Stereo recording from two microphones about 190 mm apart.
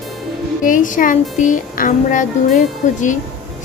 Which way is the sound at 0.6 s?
45° left (ahead or behind).